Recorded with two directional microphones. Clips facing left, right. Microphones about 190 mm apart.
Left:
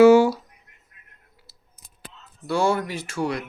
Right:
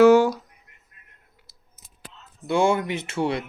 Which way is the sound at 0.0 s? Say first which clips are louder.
Left 1 dB; 10° left (ahead or behind).